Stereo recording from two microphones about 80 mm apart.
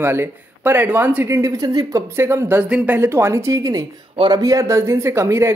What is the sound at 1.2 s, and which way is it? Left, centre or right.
Speech, right.